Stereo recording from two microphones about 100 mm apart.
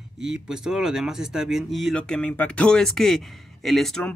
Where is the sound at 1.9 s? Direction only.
10° left (ahead or behind).